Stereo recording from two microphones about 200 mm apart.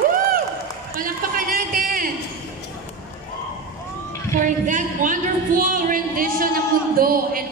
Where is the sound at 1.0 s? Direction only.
45° right (ahead or behind).